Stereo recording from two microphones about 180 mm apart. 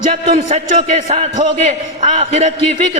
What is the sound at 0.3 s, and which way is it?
A man's voice, 35° right (ahead or behind).